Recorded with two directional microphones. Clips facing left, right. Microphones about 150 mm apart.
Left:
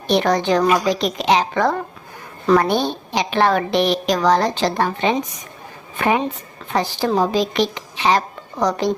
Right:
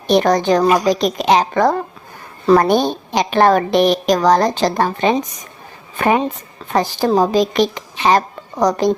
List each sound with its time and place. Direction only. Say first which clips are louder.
0.1 s a woman's voice: right 3 dB; 45° right (ahead or behind)